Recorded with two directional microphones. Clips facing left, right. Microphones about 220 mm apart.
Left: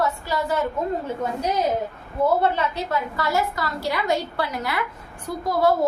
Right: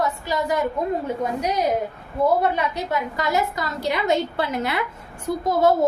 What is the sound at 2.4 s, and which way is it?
A woman's voice, 15° right (ahead or behind).